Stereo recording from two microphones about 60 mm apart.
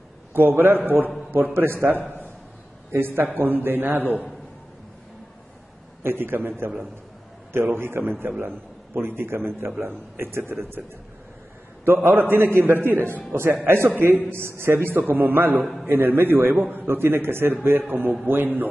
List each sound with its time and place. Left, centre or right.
0.3 s a man's voice: right
2.0 s a sound: left
2.9 s a man's voice: right
6.0 s a man's voice: right
11.8 s a man's voice: right
15.6 s a man's voice: centre
15.9 s a man's voice: right